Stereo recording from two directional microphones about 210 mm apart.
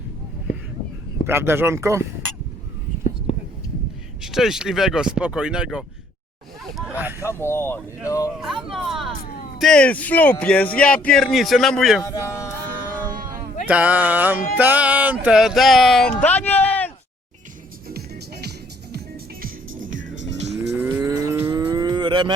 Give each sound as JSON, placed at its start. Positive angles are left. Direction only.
{"t": 1.3, "sound": "music", "side_deg": -10}
{"t": 4.2, "sound": "speech", "side_deg": 0}
{"t": 7.2, "sound": "speech", "side_deg": 10}
{"t": 8.6, "sound": "hubbub", "side_deg": 0}
{"t": 9.6, "sound": "speech", "side_deg": 5}
{"t": 12.0, "sound": "speech", "side_deg": 15}
{"t": 13.7, "sound": "music", "side_deg": -5}
{"t": 14.6, "sound": "speech", "side_deg": -5}
{"t": 17.8, "sound": "music", "side_deg": -50}
{"t": 19.8, "sound": "music", "side_deg": -65}
{"t": 20.7, "sound": "livestock", "side_deg": -10}
{"t": 21.7, "sound": "cattle", "side_deg": -20}